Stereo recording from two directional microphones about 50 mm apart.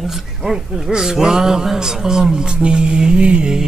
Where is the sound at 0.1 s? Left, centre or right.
Centre.